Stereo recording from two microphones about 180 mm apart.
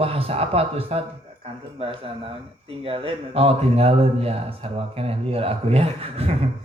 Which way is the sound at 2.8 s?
30° right (ahead or behind).